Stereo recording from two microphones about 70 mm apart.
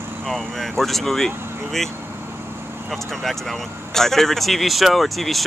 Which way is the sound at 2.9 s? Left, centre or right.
Centre.